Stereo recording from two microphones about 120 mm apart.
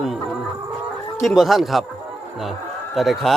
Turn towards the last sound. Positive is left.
turn(degrees=0)  # may be behind; listen again after turning